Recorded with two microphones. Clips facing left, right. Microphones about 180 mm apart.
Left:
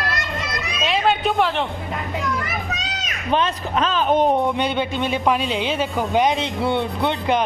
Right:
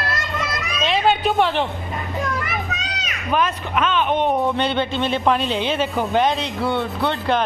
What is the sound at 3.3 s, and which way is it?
A man's voice, 30° left (ahead or behind).